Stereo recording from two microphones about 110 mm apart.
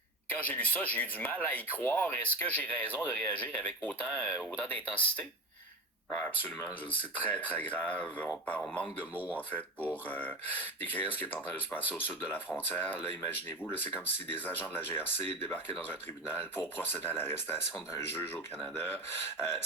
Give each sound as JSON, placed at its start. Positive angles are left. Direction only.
{"t": 0.3, "sound": "speech", "side_deg": 15}
{"t": 9.1, "sound": "speech", "side_deg": -15}
{"t": 9.9, "sound": "speech", "side_deg": 15}